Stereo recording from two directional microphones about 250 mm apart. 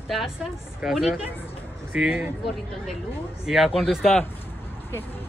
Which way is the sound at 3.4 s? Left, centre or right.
Centre.